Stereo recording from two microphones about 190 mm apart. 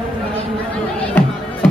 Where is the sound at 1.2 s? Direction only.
10° left (ahead or behind).